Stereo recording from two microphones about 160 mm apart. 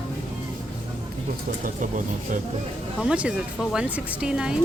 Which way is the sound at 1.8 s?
55° right (ahead or behind).